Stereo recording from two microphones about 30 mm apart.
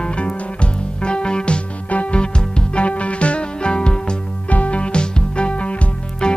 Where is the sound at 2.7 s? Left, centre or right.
Left.